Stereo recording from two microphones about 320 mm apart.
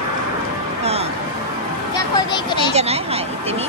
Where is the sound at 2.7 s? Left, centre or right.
Centre.